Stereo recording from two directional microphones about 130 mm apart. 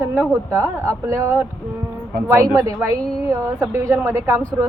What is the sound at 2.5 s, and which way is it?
Speech, 25° right (ahead or behind).